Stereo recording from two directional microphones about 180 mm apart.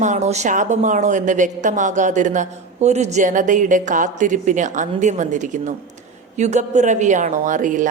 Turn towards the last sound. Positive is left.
turn(degrees=-45)  # may be behind; listen again after turning